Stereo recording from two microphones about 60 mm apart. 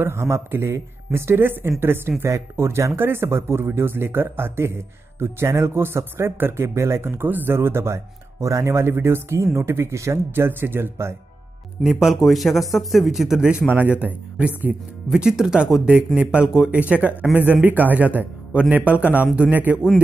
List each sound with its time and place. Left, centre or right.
0.0 s speech: right
11.8 s a man's voice: centre
13.9 s speech: right
15.0 s speech: centre; by 19.8 s right